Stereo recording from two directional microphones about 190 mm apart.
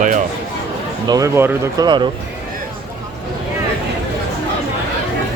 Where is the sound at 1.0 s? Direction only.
20° right (ahead or behind).